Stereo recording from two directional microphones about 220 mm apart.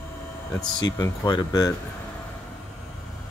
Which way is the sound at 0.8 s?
20° left (ahead or behind).